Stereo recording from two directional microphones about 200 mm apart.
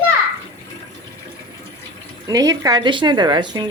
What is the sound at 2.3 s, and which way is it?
A woman's voice, 20° right (ahead or behind).